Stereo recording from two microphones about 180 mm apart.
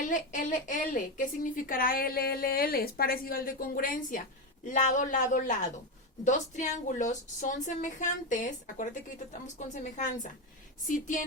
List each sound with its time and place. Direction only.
0.0 s a woman's voice: 45° left (ahead or behind)